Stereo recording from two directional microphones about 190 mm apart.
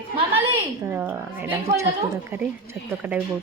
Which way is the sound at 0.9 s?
10° right (ahead or behind).